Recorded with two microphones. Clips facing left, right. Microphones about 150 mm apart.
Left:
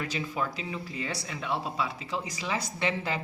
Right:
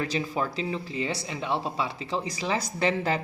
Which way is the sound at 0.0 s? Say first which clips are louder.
Right 4 dB; 30° right (ahead or behind).